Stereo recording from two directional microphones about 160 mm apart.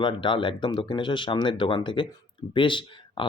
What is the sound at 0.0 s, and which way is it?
Speech, 30° left (ahead or behind).